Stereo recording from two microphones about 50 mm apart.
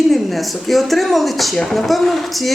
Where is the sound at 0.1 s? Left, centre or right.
Centre.